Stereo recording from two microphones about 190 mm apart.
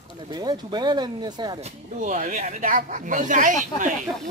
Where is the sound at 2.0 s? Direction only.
45° right (ahead or behind).